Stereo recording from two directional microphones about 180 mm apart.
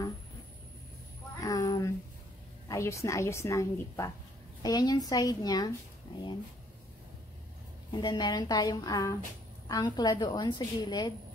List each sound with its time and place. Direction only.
1.4 s a sound: 20° left (ahead or behind)
2.7 s a woman's voice: 15° left (ahead or behind)
7.9 s a woman's voice: 25° left (ahead or behind)